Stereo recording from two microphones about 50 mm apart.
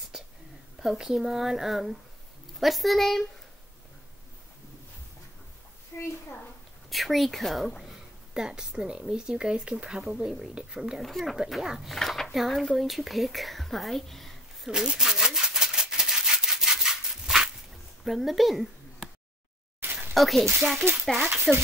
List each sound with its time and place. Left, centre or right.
0.7 s speech: centre
5.9 s a woman's voice: left
6.9 s speech: centre
8.4 s speech: centre
11.0 s speech: centre
14.7 s rub: centre
18.0 s speech: centre
19.8 s a sound: right
20.2 s speech: centre
21.5 s speech: centre